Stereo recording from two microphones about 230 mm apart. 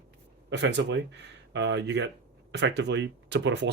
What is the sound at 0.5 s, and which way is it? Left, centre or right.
Speech, right.